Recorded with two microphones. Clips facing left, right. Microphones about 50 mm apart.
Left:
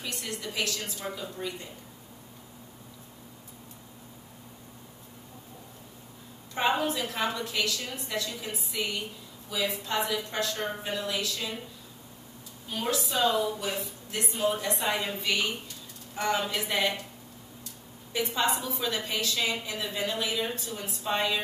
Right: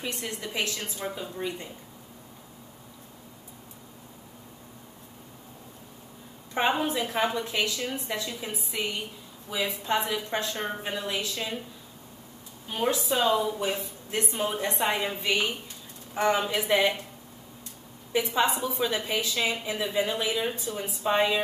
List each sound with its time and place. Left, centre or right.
0.0 s speech: right
6.8 s speech: right
12.6 s speech: right
14.9 s speech: centre
18.1 s a woman's voice: centre